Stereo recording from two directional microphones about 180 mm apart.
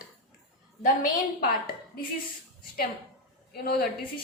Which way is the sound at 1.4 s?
55° left (ahead or behind).